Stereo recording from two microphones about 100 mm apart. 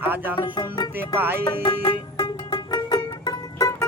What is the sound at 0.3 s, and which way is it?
Speech, 45° left (ahead or behind).